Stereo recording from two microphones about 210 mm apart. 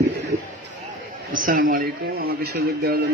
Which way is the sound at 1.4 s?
40° right (ahead or behind).